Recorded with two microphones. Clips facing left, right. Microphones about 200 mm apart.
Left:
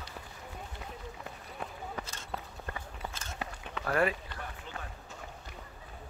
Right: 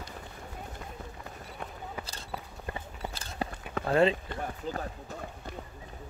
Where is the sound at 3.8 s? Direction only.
25° right (ahead or behind).